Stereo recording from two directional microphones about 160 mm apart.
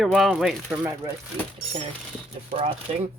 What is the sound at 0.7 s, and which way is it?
Speech, 20° right (ahead or behind).